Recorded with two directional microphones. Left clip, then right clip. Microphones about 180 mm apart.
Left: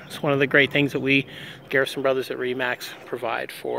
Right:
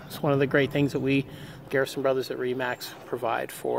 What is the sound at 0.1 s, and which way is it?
Speech, 10° left (ahead or behind).